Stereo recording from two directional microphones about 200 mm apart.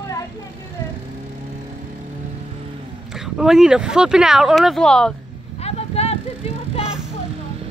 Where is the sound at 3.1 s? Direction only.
Centre (ahead or behind).